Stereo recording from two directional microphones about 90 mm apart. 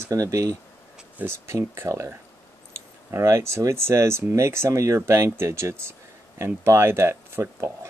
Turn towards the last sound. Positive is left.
turn(degrees=-30)  # may be behind; listen again after turning